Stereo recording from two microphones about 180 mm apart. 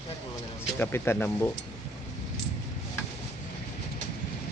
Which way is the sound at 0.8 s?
15° left (ahead or behind).